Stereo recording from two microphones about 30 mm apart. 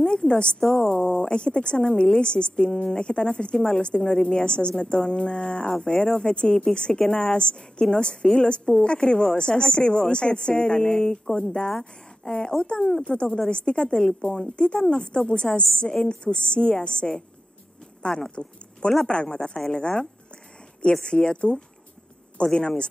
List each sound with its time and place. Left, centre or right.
0.3 s a woman's voice: left
0.6 s a woman's voice: left
18.3 s a woman's voice: left
22.4 s a woman's voice: left